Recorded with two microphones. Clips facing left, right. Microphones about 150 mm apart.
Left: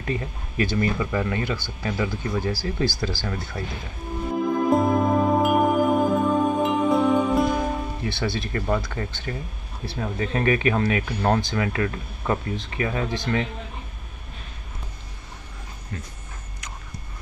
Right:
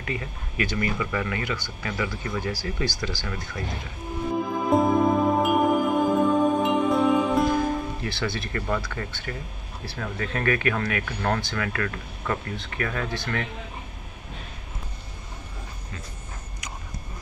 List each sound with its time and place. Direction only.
0.0 s speech: 30° left (ahead or behind)
4.6 s music: centre (ahead or behind)
8.0 s speech: 25° left (ahead or behind)